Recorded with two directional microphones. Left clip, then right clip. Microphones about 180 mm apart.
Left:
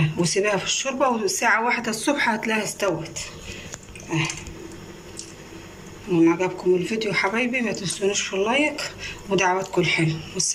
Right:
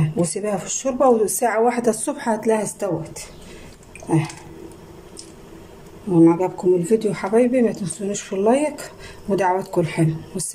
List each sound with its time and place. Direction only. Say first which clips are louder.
0.0 s a woman's voice: left 1 dB; 40° right (ahead or behind)
4.1 s a woman's voice: right 4 dB; 40° right (ahead or behind)
6.2 s speech: right 4 dB; 30° right (ahead or behind)